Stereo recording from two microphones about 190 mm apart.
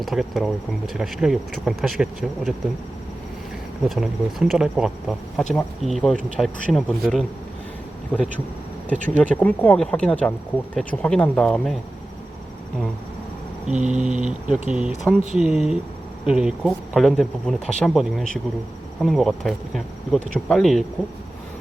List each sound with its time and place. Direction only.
0.0 s speech: centre (ahead or behind)
3.8 s speech: centre (ahead or behind)
13.7 s speech: 40° right (ahead or behind)
14.7 s speech: 5° right (ahead or behind)